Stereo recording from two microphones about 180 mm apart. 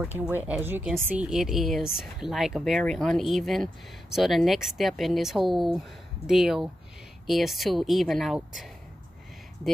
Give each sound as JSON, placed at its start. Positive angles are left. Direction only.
{"t": 0.0, "sound": "speech", "side_deg": -10}